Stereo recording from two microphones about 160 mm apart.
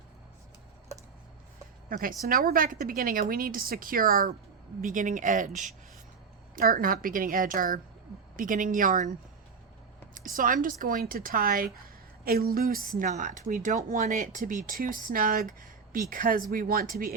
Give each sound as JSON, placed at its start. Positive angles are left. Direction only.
{"t": 1.9, "sound": "speech", "side_deg": -60}
{"t": 10.2, "sound": "speech", "side_deg": -60}